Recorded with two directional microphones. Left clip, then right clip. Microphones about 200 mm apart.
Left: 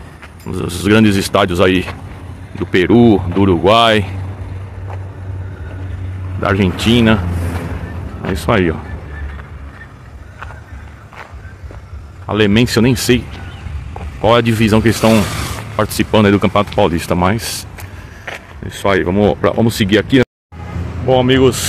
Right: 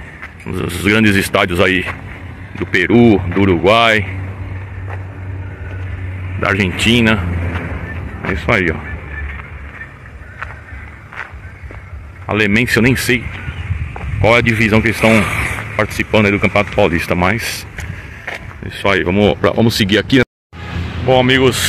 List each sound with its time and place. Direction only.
0.5 s speech: 5° left (ahead or behind)
6.4 s speech: centre (ahead or behind)
8.5 s speech: 15° left (ahead or behind)
12.3 s speech: 5° left (ahead or behind)
14.2 s speech: 10° left (ahead or behind)
15.2 s a sound: 60° left (ahead or behind)
15.7 s speech: 10° left (ahead or behind)
16.0 s speech: 20° left (ahead or behind); by 21.6 s centre (ahead or behind)